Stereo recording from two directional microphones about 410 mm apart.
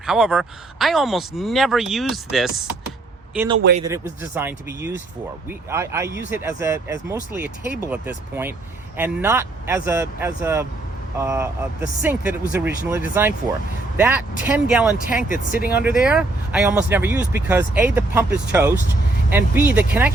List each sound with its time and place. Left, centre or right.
0.0 s speech: centre
3.6 s speech: right
4.2 s speech: centre
15.0 s speech: centre
15.7 s speech: centre